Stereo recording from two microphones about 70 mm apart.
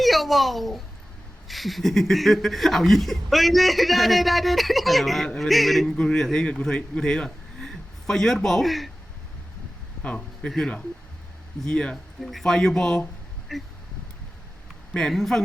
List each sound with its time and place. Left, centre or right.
0.0 s a child's voice: centre
10.0 s speech: centre
11.6 s a man's voice: centre
14.9 s speech: centre